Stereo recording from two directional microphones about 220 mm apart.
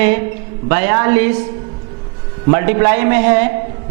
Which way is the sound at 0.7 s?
15° right (ahead or behind).